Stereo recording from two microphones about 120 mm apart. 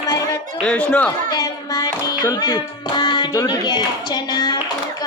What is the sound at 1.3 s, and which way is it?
A child's voice, 30° left (ahead or behind).